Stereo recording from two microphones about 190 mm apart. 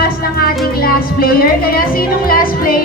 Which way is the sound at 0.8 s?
50° left (ahead or behind).